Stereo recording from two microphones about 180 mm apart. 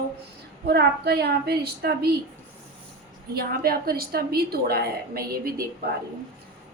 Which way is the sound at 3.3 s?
55° right (ahead or behind).